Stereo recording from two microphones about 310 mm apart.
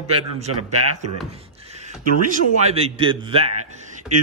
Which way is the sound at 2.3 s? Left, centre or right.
Centre.